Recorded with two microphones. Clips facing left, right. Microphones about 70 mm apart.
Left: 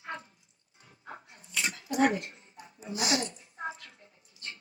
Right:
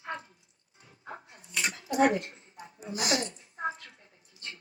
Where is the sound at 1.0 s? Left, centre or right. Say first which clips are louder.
Right 2 dB; right.